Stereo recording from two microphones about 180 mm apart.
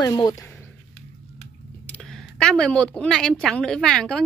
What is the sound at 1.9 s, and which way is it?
A woman's voice, 5° left (ahead or behind).